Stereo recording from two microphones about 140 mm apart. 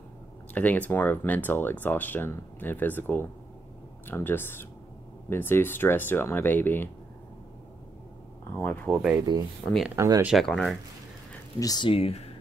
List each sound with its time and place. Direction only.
0.6 s speech: 10° left (ahead or behind)
8.5 s speech: 10° left (ahead or behind)
9.7 s speech: centre (ahead or behind)
9.9 s speech: 25° right (ahead or behind)
10.2 s speech: centre (ahead or behind)
11.6 s speech: 30° left (ahead or behind)
11.9 s speech: 45° left (ahead or behind)